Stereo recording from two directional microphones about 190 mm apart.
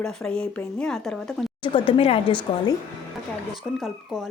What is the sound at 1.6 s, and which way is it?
Speech, 25° left (ahead or behind).